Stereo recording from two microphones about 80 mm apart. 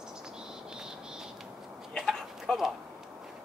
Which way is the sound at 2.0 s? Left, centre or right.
Centre.